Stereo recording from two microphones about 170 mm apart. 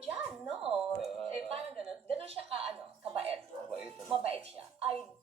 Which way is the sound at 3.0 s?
35° right (ahead or behind).